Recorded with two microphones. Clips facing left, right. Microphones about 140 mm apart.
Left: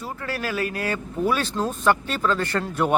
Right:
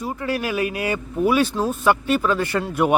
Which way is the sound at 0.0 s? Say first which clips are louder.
Right 5 dB; 15° right (ahead or behind).